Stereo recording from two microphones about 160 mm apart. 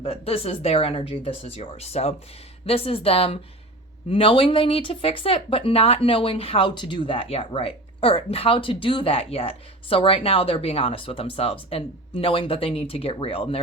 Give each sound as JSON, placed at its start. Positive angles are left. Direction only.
{"t": 0.0, "sound": "speech", "side_deg": 40}